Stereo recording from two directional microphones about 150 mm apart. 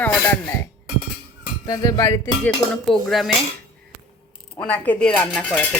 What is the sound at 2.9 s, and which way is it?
Speech, centre (ahead or behind).